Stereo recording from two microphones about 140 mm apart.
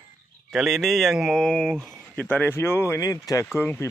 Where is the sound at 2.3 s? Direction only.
15° left (ahead or behind).